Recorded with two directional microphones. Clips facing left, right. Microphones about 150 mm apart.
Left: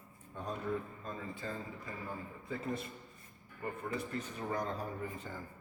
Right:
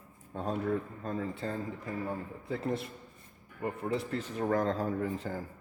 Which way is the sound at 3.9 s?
85° right.